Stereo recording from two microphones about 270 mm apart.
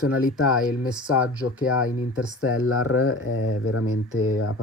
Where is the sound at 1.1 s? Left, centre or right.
Centre.